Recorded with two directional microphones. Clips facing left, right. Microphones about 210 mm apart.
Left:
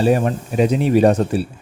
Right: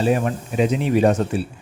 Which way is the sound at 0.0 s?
40° left (ahead or behind).